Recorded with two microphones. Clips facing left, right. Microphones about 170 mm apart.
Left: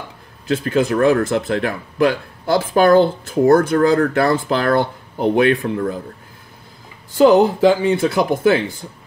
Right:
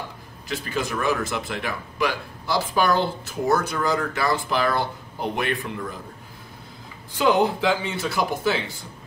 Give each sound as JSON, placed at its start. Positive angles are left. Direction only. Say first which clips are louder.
{"t": 0.5, "sound": "speech", "louder": "left 10 dB", "side_deg": 55}
{"t": 7.2, "sound": "speech", "louder": "left 8 dB", "side_deg": 40}